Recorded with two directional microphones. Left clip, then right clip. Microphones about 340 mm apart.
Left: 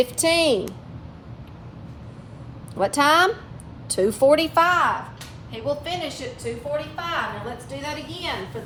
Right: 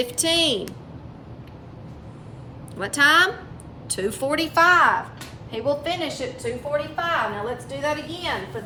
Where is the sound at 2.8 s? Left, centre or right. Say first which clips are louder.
Even; centre.